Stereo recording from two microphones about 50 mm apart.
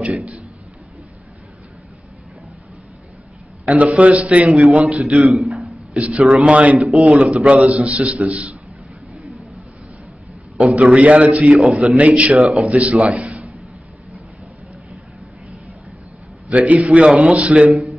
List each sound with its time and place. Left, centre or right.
0.0 s a sound: right
3.6 s a man's voice: right
4.8 s a man's voice: centre
5.3 s a sound: centre
6.1 s a man's voice: centre
10.8 s a man's voice: right
16.4 s a man's voice: right